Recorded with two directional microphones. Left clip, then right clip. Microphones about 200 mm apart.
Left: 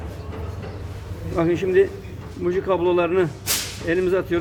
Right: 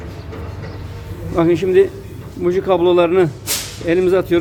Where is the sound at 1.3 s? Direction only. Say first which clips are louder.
Right 5 dB; 15° right (ahead or behind).